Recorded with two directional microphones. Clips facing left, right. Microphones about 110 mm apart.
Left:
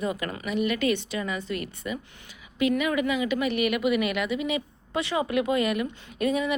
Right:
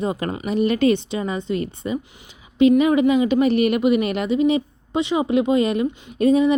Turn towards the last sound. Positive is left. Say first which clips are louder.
# right 9 dB
turn(degrees=-30)  # may be behind; listen again after turning